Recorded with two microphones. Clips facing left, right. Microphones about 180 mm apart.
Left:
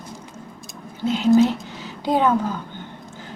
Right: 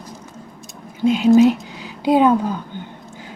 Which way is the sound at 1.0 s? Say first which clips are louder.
Right 4 dB; 15° right (ahead or behind).